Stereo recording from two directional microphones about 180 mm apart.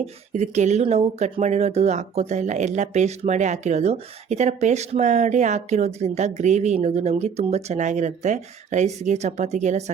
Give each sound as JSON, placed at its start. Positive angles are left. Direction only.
{"t": 0.0, "sound": "speech", "side_deg": -40}